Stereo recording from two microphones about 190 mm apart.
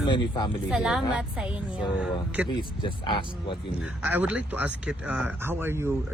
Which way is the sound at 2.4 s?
25° left (ahead or behind).